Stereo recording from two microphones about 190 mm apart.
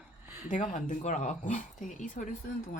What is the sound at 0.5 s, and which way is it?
Speech, 40° left (ahead or behind).